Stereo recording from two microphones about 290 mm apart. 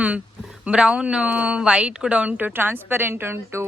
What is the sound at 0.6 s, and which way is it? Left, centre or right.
Speech, centre.